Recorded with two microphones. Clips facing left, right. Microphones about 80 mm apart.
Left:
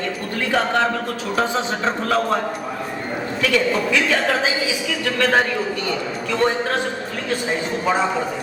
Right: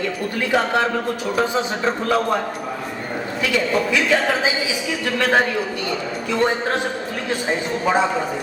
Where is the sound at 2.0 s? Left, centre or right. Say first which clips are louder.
Even; centre.